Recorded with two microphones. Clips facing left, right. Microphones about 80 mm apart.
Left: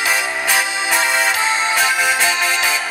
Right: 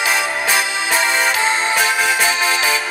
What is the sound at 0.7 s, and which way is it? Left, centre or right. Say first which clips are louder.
Music: even; centre.